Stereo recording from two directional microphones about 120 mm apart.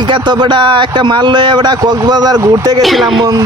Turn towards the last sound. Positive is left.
turn(degrees=0)  # may be behind; listen again after turning